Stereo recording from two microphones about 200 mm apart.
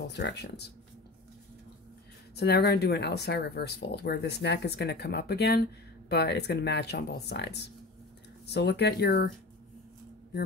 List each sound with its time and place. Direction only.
0.0 s speech: 55° left (ahead or behind)
2.3 s speech: 55° left (ahead or behind)